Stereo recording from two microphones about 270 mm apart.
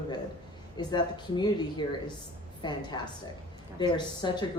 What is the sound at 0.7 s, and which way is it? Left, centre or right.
A man's voice, centre.